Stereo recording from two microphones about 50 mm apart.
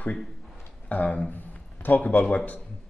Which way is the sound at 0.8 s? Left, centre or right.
Left.